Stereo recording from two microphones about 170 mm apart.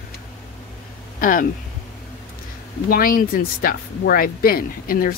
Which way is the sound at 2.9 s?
55° left (ahead or behind).